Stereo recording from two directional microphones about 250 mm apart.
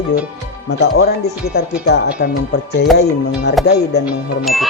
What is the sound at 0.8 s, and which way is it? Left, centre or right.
Speech, left.